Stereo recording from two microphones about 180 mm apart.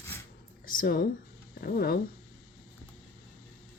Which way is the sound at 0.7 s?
55° left (ahead or behind).